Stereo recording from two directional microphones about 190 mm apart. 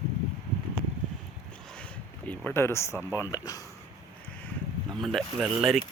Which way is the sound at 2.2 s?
10° left (ahead or behind).